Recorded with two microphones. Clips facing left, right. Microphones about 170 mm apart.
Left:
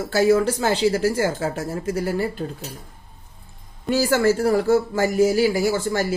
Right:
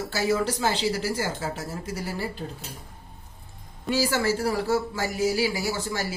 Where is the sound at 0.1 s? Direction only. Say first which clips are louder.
Left 9 dB; 50° left (ahead or behind).